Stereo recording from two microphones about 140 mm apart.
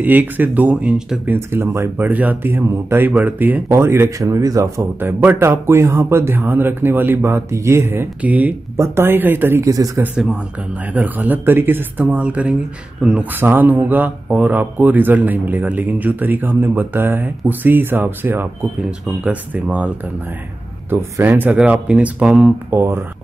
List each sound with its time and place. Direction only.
0.0 s speech: 15° right (ahead or behind)
9.9 s speech: 5° right (ahead or behind)
20.9 s speech: 15° right (ahead or behind)